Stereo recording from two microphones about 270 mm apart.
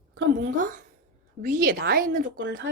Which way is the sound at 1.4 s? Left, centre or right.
Right.